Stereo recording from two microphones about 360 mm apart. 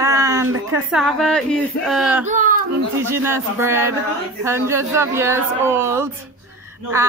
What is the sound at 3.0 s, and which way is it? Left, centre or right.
Speech, centre.